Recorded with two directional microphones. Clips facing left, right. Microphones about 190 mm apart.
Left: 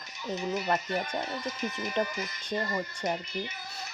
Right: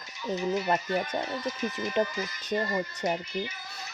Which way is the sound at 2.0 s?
20° right (ahead or behind).